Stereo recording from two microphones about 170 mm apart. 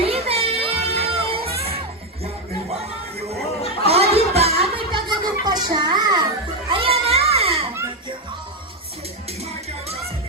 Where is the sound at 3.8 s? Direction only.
35° right (ahead or behind).